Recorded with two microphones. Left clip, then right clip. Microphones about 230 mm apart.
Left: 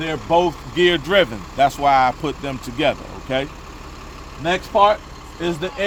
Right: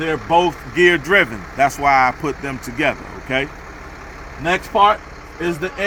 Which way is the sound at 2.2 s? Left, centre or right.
Left.